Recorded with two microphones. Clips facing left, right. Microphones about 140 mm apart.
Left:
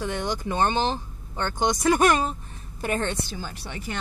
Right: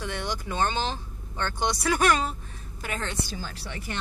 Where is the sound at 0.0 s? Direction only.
15° left (ahead or behind).